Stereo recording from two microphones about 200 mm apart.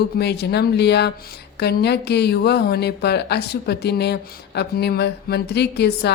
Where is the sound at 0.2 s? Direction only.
55° left (ahead or behind).